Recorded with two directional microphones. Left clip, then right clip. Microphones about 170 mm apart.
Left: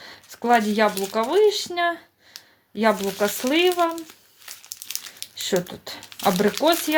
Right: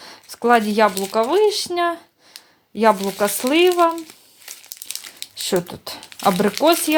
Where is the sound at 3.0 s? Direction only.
25° right (ahead or behind).